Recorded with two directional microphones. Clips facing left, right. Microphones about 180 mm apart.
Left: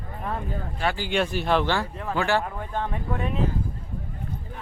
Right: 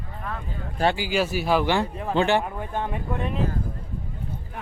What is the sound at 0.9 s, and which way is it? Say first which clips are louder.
Speech: right 1 dB; 5° right (ahead or behind).